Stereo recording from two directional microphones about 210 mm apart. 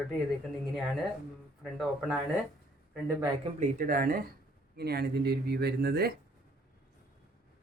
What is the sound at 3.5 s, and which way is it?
Speech, 40° right (ahead or behind).